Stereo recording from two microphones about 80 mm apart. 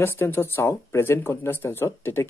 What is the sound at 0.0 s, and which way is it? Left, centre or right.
Speech, left.